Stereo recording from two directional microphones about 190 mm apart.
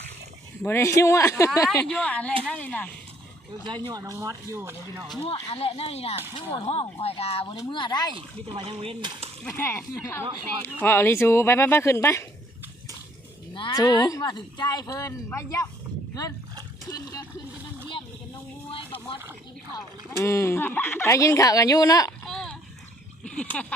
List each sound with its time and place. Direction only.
0.6 s speech: 15° left (ahead or behind)
3.7 s speech: 25° right (ahead or behind)
5.2 s speech: 30° left (ahead or behind)
8.1 s speech: 30° right (ahead or behind)
9.4 s speech: 15° left (ahead or behind)
13.5 s speech: 25° left (ahead or behind)
16.9 s speech: 20° left (ahead or behind)
19.7 s speech: 15° left (ahead or behind)
22.3 s a sound: centre (ahead or behind)
23.3 s speech: 5° left (ahead or behind)